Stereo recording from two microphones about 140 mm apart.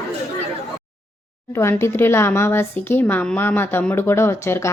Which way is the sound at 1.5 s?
20° left (ahead or behind).